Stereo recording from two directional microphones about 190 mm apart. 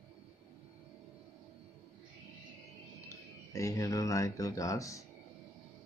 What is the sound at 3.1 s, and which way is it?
Speech, 15° left (ahead or behind).